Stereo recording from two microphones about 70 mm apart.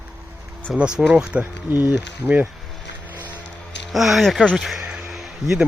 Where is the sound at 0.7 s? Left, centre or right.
Centre.